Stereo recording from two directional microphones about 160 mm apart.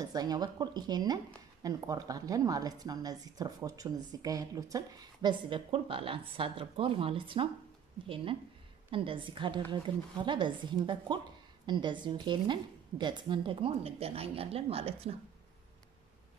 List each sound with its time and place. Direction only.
0.0 s a woman's voice: 25° right (ahead or behind)